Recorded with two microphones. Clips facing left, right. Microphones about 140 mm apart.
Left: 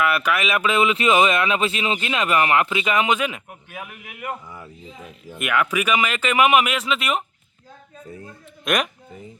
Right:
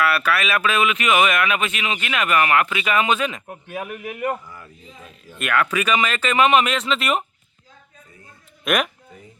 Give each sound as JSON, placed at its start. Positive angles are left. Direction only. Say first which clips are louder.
{"t": 0.0, "sound": "speech", "louder": "even", "side_deg": 15}
{"t": 3.4, "sound": "a man's voice", "louder": "right 6 dB", "side_deg": -30}
{"t": 4.4, "sound": "speech", "louder": "left 3 dB", "side_deg": 20}
{"t": 8.6, "sound": "speech", "louder": "right 1 dB", "side_deg": -5}